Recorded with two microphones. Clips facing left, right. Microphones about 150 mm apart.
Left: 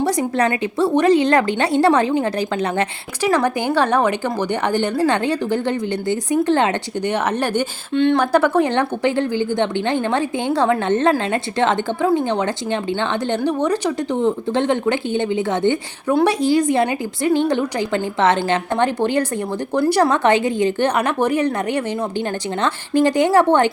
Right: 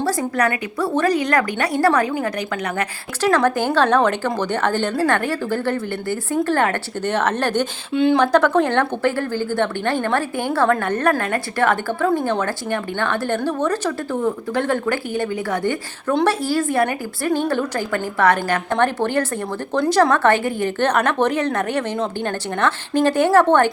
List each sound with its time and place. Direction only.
0.0 s speech: 20° left (ahead or behind)
3.2 s a woman's voice: 10° left (ahead or behind)
7.9 s speech: 5° right (ahead or behind)
8.2 s a woman's voice: 10° left (ahead or behind)
23.0 s a woman's voice: 15° left (ahead or behind)